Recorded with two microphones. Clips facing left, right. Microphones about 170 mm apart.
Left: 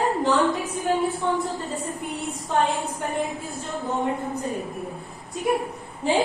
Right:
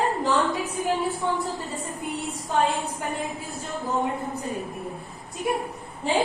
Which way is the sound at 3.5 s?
Centre (ahead or behind).